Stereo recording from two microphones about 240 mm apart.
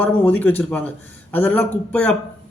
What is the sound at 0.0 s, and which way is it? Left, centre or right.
A man's voice, centre.